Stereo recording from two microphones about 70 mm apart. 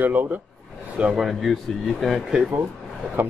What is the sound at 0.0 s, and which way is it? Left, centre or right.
Speech, right.